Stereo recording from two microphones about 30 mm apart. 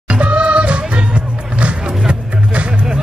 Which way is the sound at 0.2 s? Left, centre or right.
Right.